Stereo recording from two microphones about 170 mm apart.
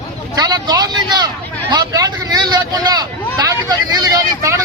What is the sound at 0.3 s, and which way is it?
A man's voice, 20° right (ahead or behind).